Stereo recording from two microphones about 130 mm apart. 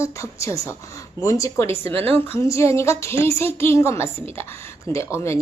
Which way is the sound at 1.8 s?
45° right (ahead or behind).